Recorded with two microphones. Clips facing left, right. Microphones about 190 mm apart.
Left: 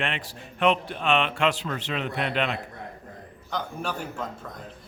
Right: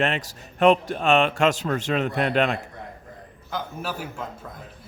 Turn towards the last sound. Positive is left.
turn(degrees=-5)  # may be behind; listen again after turning